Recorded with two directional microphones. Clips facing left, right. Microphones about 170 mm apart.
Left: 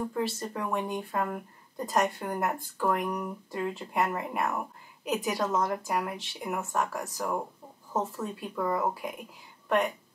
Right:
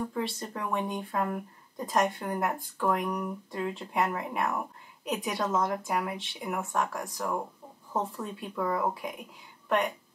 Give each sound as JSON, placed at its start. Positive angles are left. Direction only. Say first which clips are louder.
{"t": 0.1, "sound": "speech", "louder": "left 2 dB", "side_deg": 0}